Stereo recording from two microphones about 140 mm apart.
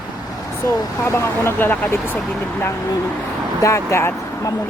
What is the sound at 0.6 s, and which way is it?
Speech, 15° left (ahead or behind).